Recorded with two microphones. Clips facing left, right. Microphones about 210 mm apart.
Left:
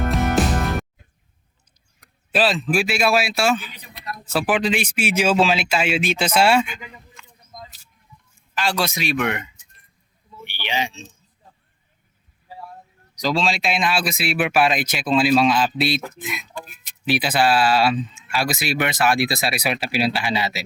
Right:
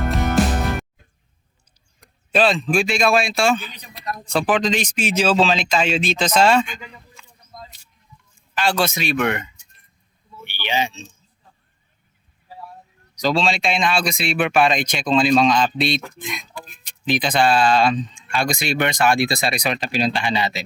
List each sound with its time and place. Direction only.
0.0 s music: centre (ahead or behind)
2.0 s speech: 5° left (ahead or behind)
7.5 s a sound: 15° left (ahead or behind)
8.5 s speech: centre (ahead or behind)
10.4 s a sound: centre (ahead or behind)
13.2 s speech: centre (ahead or behind)